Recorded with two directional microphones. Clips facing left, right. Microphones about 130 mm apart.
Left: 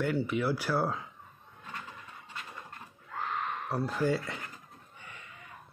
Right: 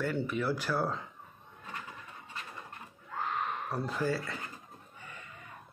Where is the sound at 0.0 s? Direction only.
15° left (ahead or behind).